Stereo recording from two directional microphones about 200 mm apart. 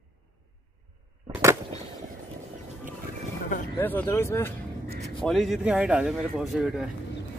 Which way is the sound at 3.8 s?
10° left (ahead or behind).